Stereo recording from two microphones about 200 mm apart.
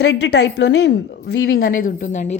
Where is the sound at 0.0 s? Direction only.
60° left (ahead or behind).